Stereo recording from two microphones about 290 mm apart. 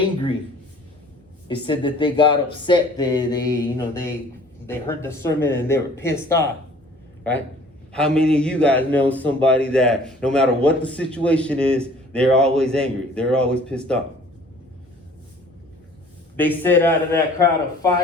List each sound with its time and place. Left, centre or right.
1.5 s speech: centre
7.9 s a man's voice: centre
16.4 s speech: centre